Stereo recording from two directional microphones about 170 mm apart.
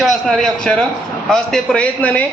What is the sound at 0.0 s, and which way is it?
A man's voice, centre (ahead or behind).